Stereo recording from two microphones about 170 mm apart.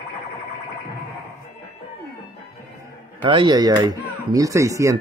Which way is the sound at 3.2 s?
30° right (ahead or behind).